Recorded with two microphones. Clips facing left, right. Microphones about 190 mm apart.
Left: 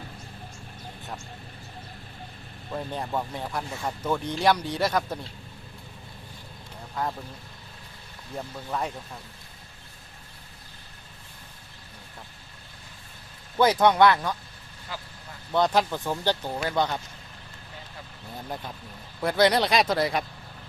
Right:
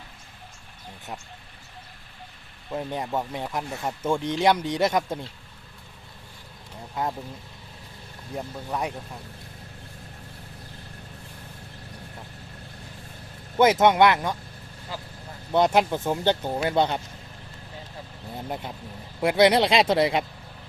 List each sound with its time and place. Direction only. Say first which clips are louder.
2.7 s speech: right 2 dB; 15° right (ahead or behind)
6.9 s speech: right 2 dB; 15° right (ahead or behind)
8.4 s speech: right 1 dB; 10° right (ahead or behind)
13.6 s speech: right 2 dB; 20° right (ahead or behind)
15.5 s speech: right 3 dB; 20° right (ahead or behind)
18.3 s speech: right 3 dB; 20° right (ahead or behind)